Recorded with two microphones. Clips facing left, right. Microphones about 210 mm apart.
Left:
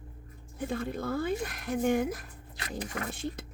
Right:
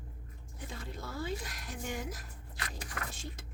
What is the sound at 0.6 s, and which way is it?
Speech, 55° left (ahead or behind).